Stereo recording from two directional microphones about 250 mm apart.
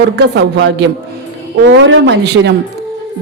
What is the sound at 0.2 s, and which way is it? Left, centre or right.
A woman's voice, right.